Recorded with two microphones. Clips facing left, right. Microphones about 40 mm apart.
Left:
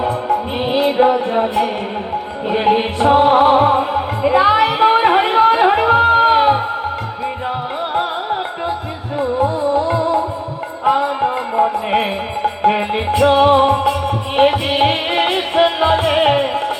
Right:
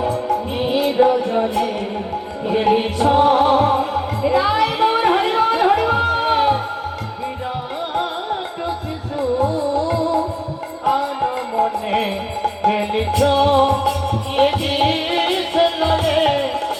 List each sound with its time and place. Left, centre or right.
0.0 s music: left
7.9 s music: left